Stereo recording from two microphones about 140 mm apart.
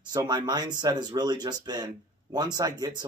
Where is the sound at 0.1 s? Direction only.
30° right (ahead or behind).